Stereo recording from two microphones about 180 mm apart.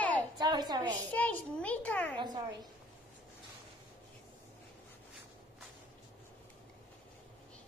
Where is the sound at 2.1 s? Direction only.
25° right (ahead or behind).